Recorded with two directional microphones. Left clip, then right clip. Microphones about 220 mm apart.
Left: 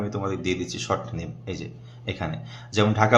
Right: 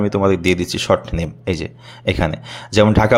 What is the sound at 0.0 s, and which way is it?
Speech, 40° right (ahead or behind).